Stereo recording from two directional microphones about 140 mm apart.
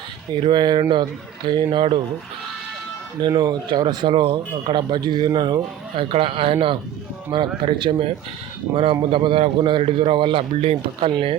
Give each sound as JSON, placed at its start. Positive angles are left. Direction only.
{"t": 0.3, "sound": "a man's voice", "side_deg": -35}
{"t": 3.2, "sound": "a man's voice", "side_deg": -30}